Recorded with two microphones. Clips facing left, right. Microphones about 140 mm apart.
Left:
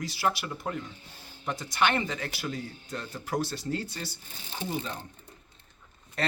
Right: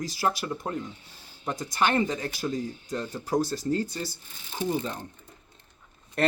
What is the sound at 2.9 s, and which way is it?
Speech, 40° right (ahead or behind).